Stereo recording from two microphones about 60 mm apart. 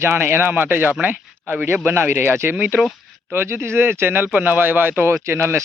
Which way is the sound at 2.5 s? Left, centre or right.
Right.